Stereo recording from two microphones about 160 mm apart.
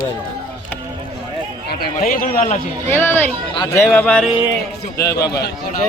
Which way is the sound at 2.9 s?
15° left (ahead or behind).